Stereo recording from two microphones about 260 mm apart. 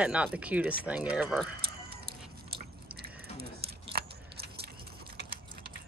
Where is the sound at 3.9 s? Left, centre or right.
Right.